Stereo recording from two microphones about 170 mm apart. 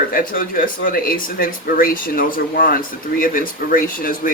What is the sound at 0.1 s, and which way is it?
Speech, 55° left (ahead or behind).